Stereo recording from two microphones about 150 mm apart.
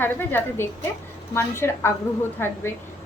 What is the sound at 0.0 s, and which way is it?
A woman's voice, 15° left (ahead or behind).